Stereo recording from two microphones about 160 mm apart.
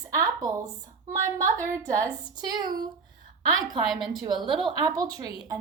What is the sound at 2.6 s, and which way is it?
Speech, 65° right (ahead or behind).